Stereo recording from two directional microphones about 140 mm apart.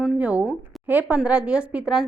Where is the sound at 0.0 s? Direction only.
10° right (ahead or behind).